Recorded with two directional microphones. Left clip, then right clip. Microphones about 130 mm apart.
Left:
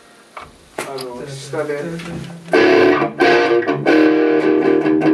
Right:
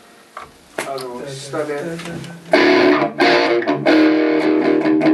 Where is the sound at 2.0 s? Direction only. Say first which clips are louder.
Even; 20° right (ahead or behind).